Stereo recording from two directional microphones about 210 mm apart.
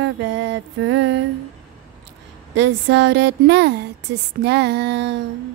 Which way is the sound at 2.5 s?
60° right (ahead or behind).